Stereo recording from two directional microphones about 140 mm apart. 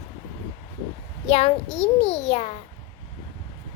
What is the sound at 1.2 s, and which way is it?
A child's voice, 50° left (ahead or behind).